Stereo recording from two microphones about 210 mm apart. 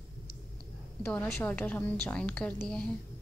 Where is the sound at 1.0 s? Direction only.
10° left (ahead or behind).